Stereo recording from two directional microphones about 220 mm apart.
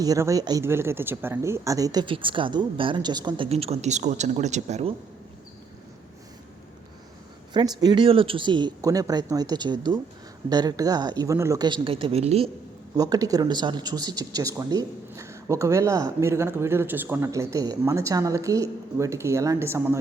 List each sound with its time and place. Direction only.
0.0 s speech: 15° right (ahead or behind)
7.5 s speech: 20° right (ahead or behind)
13.0 s speech: 15° right (ahead or behind)